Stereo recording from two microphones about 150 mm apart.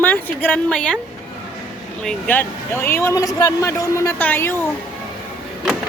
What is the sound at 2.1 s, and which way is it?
Speech, 10° left (ahead or behind).